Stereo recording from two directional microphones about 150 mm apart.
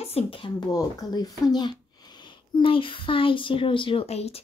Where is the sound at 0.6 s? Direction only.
25° left (ahead or behind).